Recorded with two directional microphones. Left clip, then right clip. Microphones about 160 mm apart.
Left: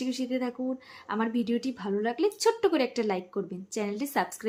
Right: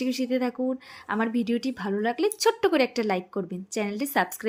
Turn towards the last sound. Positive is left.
turn(degrees=-25)  # may be behind; listen again after turning